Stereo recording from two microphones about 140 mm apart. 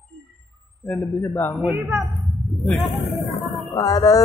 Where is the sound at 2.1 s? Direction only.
Centre (ahead or behind).